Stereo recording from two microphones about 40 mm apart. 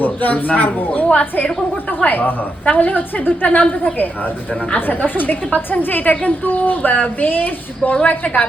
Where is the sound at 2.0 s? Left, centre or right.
Left.